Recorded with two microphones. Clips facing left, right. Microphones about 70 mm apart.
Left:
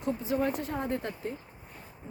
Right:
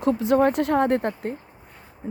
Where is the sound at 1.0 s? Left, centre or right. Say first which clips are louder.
Right 8 dB; right.